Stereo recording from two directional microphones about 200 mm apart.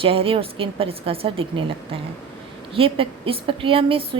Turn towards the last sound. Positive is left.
turn(degrees=-25)  # may be behind; listen again after turning